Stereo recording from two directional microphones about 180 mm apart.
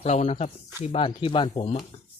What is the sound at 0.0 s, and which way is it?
Speech, 35° left (ahead or behind).